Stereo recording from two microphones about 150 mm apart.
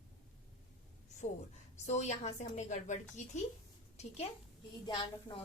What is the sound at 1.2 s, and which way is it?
A woman's voice, 50° left (ahead or behind).